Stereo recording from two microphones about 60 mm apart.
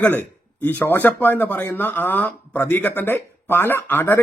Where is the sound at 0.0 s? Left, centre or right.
Left.